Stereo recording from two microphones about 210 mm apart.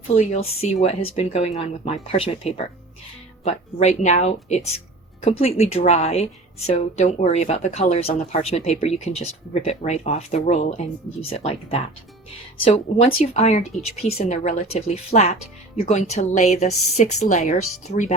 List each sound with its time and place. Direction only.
0.1 s a woman's voice: 30° left (ahead or behind)